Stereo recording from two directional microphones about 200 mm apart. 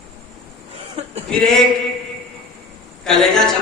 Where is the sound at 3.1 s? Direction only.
Centre (ahead or behind).